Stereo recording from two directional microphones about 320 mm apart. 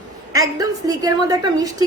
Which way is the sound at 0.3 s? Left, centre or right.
Centre.